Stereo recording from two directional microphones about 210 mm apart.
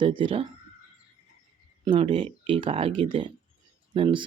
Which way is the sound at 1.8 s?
25° right (ahead or behind).